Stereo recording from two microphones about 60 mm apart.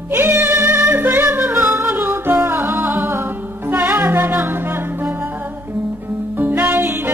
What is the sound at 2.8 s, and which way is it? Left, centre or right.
Music, right.